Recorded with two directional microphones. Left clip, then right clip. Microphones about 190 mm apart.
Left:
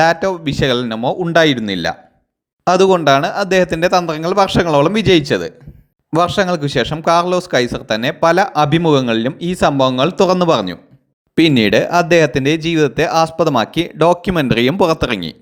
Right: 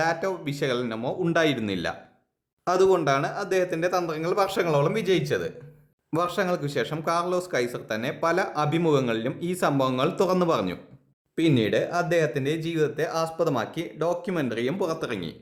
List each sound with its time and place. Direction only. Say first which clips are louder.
0.0 s speech: left 12 dB; 35° left (ahead or behind)